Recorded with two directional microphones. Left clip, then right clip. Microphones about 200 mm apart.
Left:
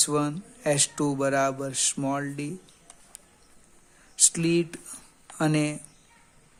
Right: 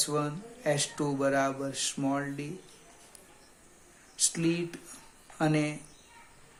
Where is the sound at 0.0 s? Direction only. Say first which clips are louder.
Left 5 dB; 50° left (ahead or behind).